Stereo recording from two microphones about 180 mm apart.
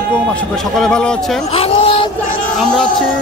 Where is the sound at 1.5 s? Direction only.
30° left (ahead or behind).